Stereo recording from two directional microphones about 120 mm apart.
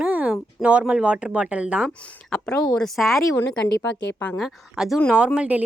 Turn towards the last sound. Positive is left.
turn(degrees=-10)  # may be behind; listen again after turning